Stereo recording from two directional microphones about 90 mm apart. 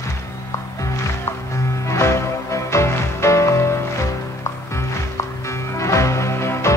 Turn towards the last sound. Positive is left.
turn(degrees=30)  # may be behind; listen again after turning